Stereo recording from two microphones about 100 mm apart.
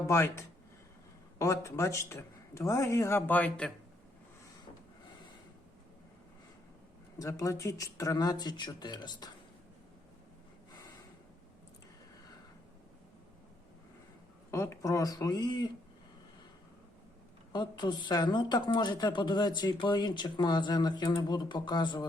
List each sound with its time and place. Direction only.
0.1 s a man's voice: 25° left (ahead or behind)
7.2 s speech: 35° left (ahead or behind)
14.5 s speech: 30° left (ahead or behind)
17.5 s speech: 50° left (ahead or behind)